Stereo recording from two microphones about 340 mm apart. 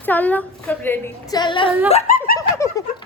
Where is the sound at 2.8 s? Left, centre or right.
Centre.